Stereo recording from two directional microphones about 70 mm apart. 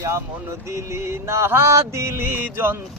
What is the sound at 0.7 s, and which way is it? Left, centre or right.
Music, right.